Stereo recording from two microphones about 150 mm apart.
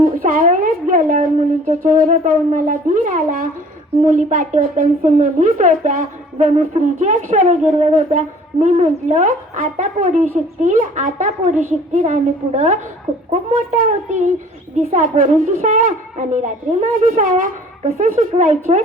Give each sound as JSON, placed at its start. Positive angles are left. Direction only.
{"t": 0.0, "sound": "a woman's voice", "side_deg": -65}